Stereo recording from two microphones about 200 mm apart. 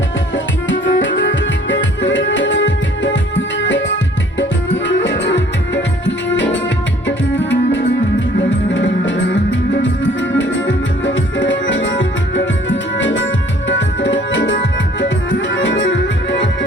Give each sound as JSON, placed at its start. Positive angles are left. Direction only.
{"t": 0.3, "sound": "music", "side_deg": 65}
{"t": 13.7, "sound": "tabla", "side_deg": 65}
{"t": 15.4, "sound": "music", "side_deg": 65}